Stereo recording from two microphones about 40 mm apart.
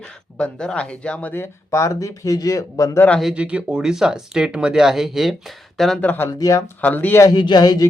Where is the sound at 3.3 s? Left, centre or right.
Right; by 5.4 s centre.